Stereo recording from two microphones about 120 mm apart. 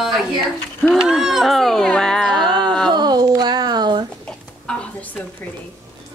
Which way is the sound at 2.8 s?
35° right (ahead or behind).